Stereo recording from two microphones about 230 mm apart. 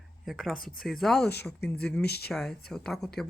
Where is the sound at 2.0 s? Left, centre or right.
Left.